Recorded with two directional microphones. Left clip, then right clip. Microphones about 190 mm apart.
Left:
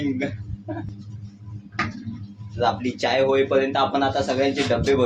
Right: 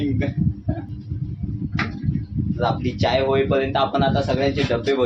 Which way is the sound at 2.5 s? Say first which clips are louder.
Left 1 dB; 5° right (ahead or behind).